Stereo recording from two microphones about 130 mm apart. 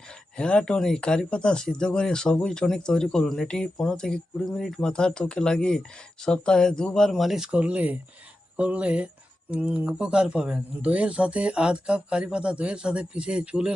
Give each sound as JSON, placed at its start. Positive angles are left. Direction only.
{"t": 0.3, "sound": "speech", "side_deg": 5}